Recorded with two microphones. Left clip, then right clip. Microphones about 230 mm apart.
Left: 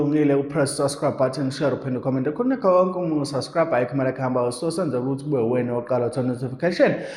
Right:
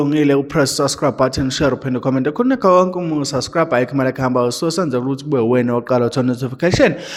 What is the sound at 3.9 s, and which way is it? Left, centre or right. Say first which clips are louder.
Speech: right 6 dB; right.